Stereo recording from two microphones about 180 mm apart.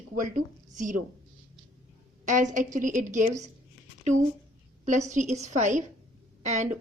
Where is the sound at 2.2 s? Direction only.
45° right (ahead or behind).